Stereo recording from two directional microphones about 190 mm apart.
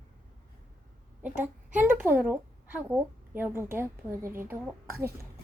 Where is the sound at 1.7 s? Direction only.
10° right (ahead or behind).